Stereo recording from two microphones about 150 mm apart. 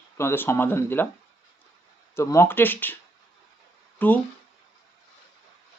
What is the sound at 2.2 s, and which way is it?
Speech, 20° left (ahead or behind).